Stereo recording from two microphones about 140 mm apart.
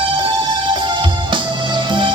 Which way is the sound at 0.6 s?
35° right (ahead or behind).